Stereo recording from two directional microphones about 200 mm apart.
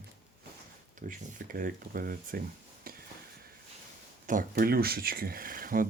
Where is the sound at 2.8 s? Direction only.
45° right (ahead or behind).